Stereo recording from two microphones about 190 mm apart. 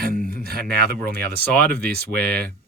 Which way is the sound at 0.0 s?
50° right (ahead or behind).